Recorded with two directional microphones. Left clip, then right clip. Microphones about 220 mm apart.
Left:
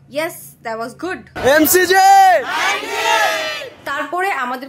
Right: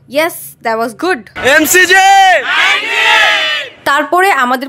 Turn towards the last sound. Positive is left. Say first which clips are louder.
# right 10 dB
turn(degrees=-50)  # may be behind; listen again after turning